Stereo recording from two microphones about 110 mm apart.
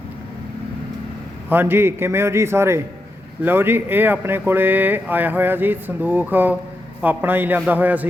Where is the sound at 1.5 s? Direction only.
20° right (ahead or behind).